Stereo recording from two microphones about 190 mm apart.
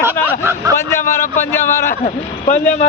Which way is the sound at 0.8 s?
15° left (ahead or behind).